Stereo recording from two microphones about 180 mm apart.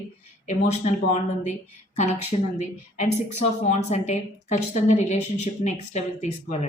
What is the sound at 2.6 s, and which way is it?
A woman's voice, 40° left (ahead or behind).